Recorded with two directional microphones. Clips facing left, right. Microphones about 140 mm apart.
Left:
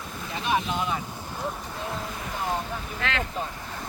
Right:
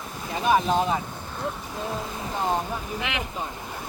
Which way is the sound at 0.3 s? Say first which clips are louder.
Right 6 dB; 40° right (ahead or behind).